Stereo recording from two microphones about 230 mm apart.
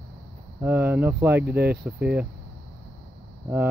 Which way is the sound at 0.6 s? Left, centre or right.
Centre.